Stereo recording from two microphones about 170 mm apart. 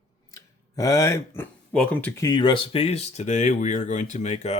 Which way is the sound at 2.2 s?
25° left (ahead or behind).